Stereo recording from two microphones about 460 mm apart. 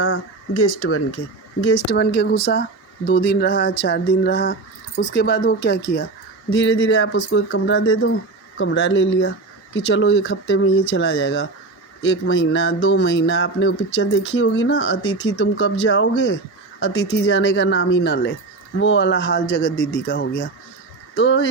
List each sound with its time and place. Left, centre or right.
0.0 s speech: left